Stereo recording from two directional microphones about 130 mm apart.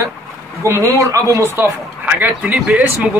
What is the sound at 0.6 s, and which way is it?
Speech, 25° right (ahead or behind).